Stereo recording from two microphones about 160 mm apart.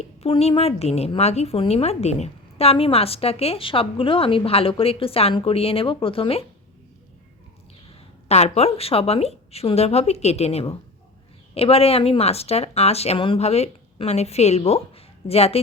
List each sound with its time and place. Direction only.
0.2 s a woman's voice: 40° left (ahead or behind)
8.3 s a woman's voice: 40° left (ahead or behind)